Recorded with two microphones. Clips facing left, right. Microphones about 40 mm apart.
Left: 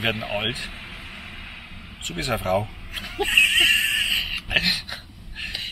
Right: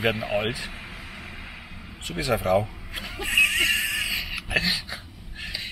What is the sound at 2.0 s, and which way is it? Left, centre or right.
Speech, left.